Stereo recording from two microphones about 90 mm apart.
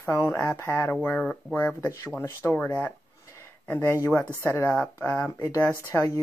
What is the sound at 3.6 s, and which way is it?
Speech, 25° left (ahead or behind).